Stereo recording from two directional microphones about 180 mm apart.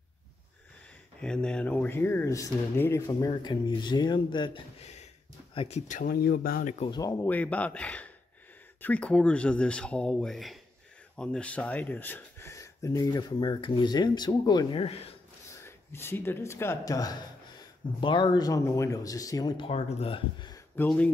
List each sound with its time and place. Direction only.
1.2 s speech: 5° left (ahead or behind); by 6.8 s 50° left (ahead or behind)
6.8 s speech: 20° left (ahead or behind)
15.5 s speech: 15° left (ahead or behind)
20.7 s speech: 10° left (ahead or behind)